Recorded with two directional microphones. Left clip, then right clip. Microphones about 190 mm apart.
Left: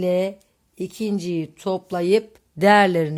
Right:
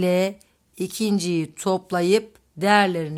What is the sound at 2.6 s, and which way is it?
Speech, 20° left (ahead or behind).